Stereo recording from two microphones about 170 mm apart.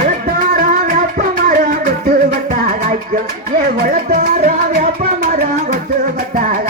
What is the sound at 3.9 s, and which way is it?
Music, 55° right (ahead or behind).